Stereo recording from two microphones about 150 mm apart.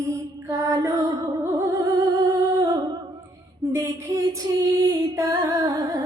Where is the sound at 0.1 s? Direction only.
20° right (ahead or behind).